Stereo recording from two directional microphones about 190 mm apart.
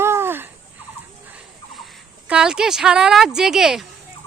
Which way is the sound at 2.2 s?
5° right (ahead or behind).